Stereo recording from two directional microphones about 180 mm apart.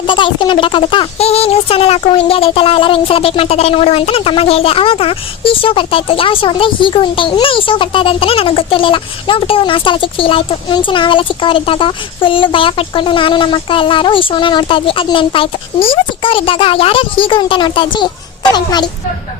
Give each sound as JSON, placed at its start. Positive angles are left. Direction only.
{"t": 0.0, "sound": "speech", "side_deg": 25}